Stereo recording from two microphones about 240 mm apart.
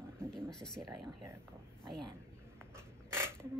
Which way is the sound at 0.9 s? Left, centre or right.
Centre.